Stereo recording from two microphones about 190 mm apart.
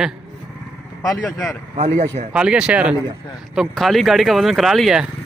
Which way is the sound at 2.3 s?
5° right (ahead or behind).